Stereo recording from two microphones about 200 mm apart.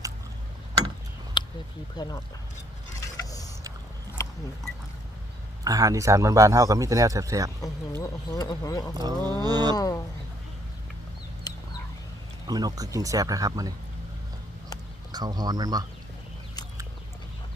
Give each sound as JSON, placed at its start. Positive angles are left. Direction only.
{"t": 1.4, "sound": "a sound", "side_deg": 25}
{"t": 2.0, "sound": "speech", "side_deg": 20}
{"t": 3.2, "sound": "vehicle", "side_deg": 15}
{"t": 4.2, "sound": "a sound", "side_deg": 15}
{"t": 5.6, "sound": "speech", "side_deg": -15}
{"t": 7.6, "sound": "speech", "side_deg": 15}
{"t": 9.0, "sound": "speech", "side_deg": -20}
{"t": 9.7, "sound": "speech", "side_deg": 20}
{"t": 11.5, "sound": "chicken", "side_deg": 20}
{"t": 12.5, "sound": "speech", "side_deg": -20}
{"t": 15.1, "sound": "speech", "side_deg": -20}